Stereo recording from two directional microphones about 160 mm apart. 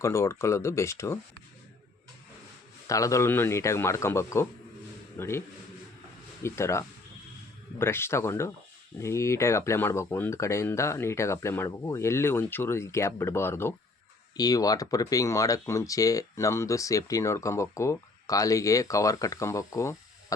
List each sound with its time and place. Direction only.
0.0 s speech: 20° left (ahead or behind)
2.8 s a man's voice: 20° left (ahead or behind)
6.4 s speech: 15° left (ahead or behind)